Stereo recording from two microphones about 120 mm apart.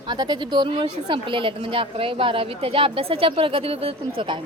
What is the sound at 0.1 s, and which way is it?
Speech, 40° right (ahead or behind).